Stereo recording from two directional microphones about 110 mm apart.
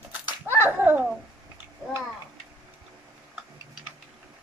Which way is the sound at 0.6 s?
20° right (ahead or behind).